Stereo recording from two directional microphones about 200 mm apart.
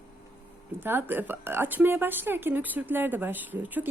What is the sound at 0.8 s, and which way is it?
A woman's voice, 10° right (ahead or behind).